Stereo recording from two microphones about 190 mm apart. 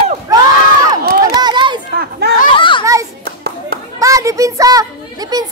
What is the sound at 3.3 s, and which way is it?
Clapping, 55° right (ahead or behind).